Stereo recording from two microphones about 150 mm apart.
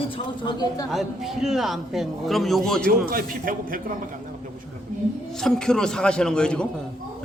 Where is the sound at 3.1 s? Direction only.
70° right (ahead or behind).